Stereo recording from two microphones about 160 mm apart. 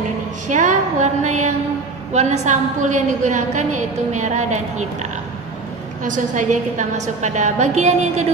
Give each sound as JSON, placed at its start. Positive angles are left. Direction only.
{"t": 0.5, "sound": "a sound", "side_deg": -50}
{"t": 2.1, "sound": "a woman's voice", "side_deg": -45}
{"t": 6.0, "sound": "a woman's voice", "side_deg": -50}